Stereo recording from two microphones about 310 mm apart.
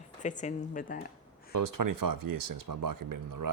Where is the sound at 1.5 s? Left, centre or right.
Right.